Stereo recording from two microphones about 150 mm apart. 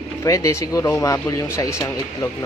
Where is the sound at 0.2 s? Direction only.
20° left (ahead or behind).